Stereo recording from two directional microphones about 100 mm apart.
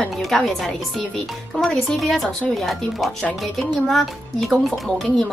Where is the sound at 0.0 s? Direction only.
Centre (ahead or behind).